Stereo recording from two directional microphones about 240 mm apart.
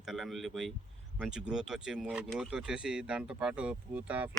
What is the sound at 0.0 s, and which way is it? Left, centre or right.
Speech, centre.